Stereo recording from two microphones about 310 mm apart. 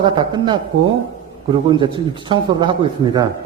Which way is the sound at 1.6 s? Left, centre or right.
Centre.